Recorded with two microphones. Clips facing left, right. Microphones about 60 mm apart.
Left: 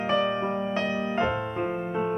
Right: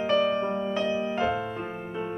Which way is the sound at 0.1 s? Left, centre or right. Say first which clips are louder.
Right 1 dB; centre.